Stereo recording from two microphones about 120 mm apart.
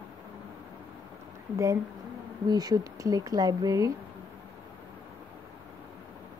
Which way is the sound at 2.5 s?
30° right (ahead or behind).